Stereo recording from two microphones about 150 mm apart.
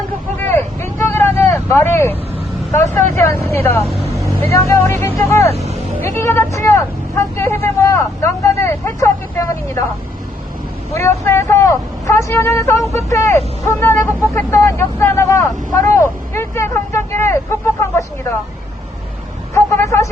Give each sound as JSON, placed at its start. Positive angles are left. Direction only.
{"t": 0.3, "sound": "vehicle", "side_deg": 15}
{"t": 2.7, "sound": "speech", "side_deg": 15}
{"t": 5.4, "sound": "speech", "side_deg": -45}
{"t": 6.0, "sound": "speech", "side_deg": 20}
{"t": 10.9, "sound": "speech", "side_deg": 15}
{"t": 19.5, "sound": "vehicle", "side_deg": 20}